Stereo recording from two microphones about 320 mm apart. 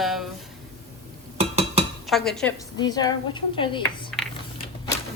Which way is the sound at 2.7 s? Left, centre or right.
Centre.